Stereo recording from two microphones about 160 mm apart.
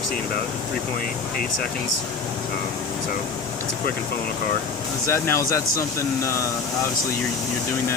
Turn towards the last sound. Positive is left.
turn(degrees=20)  # may be behind; listen again after turning